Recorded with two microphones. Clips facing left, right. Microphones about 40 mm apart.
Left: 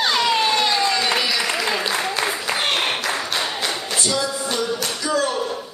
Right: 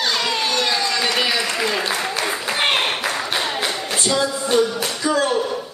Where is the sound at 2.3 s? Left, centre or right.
Centre.